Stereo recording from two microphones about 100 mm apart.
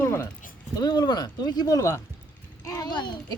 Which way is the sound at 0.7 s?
45° left (ahead or behind).